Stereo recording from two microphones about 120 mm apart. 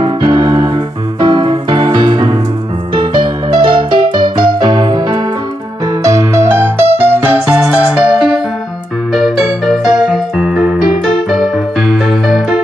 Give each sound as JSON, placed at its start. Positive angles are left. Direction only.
{"t": 0.0, "sound": "keyboard", "side_deg": -40}
{"t": 2.9, "sound": "music", "side_deg": -40}
{"t": 6.0, "sound": "music", "side_deg": -25}